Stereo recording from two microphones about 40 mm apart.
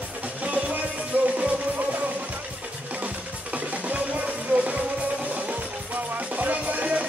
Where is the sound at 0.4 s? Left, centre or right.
Right.